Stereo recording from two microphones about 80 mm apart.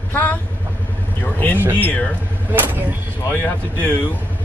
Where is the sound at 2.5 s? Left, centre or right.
Right.